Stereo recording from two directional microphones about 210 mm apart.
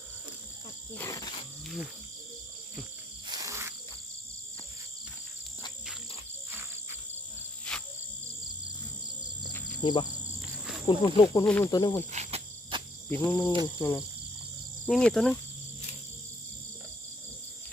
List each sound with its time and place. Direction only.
0.9 s wild animals: 15° left (ahead or behind)
3.2 s insect: 15° right (ahead or behind)
7.7 s cricket: 5° left (ahead or behind)
9.8 s speech: 20° left (ahead or behind)
11.4 s cricket: 10° left (ahead or behind)
12.1 s cricket: 30° right (ahead or behind)
13.1 s cricket: 10° left (ahead or behind)
14.8 s speech: centre (ahead or behind)